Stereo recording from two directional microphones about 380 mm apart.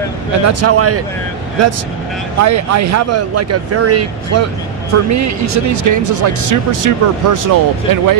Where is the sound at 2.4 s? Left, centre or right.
Right.